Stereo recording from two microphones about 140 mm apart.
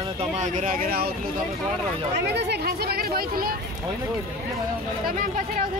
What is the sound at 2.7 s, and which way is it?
Speech, 90° right.